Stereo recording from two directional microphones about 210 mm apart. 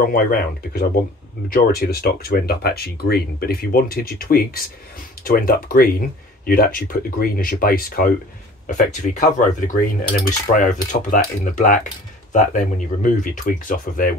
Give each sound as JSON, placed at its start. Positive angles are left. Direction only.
{"t": 0.0, "sound": "speech", "side_deg": 45}
{"t": 8.6, "sound": "cutlery", "side_deg": 35}